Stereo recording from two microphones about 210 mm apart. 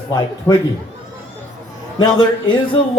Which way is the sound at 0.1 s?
15° left (ahead or behind).